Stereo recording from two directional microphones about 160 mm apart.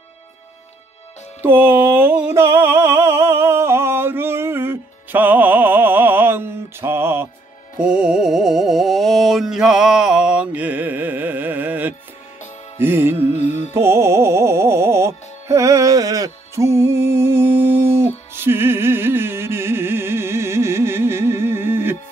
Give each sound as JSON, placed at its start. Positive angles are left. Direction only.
{"t": 1.4, "sound": "music", "side_deg": -10}
{"t": 13.4, "sound": "music", "side_deg": 50}
{"t": 13.7, "sound": "music", "side_deg": -15}